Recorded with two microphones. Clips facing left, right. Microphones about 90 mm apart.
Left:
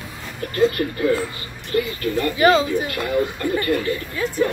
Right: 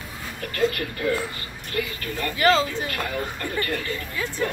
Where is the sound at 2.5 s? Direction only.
15° left (ahead or behind).